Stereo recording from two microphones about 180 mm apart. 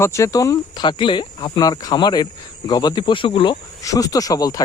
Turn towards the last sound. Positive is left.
turn(degrees=20)  # may be behind; listen again after turning